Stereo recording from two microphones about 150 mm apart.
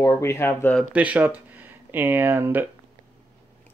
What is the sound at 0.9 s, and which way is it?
Speech, 10° right (ahead or behind).